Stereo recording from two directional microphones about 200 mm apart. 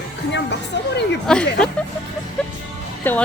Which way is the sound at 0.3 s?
60° left (ahead or behind).